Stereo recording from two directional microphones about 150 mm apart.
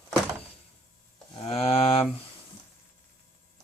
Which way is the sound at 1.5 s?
40° left (ahead or behind).